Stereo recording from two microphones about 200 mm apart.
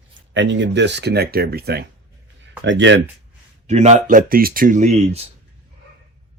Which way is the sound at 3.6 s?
35° right (ahead or behind).